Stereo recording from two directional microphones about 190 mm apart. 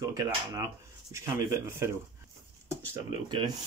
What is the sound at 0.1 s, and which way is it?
Speech, 20° right (ahead or behind).